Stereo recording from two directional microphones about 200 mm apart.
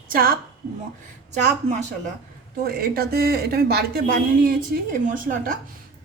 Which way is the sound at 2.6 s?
50° right (ahead or behind).